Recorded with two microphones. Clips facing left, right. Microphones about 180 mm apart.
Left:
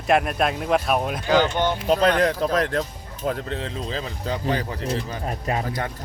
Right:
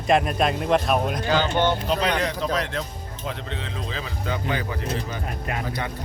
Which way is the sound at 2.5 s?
45° left (ahead or behind).